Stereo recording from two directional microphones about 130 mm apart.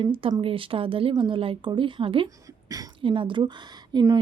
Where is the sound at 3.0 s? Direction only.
40° right (ahead or behind).